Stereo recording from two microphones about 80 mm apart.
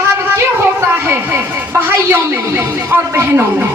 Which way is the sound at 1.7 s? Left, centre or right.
Right.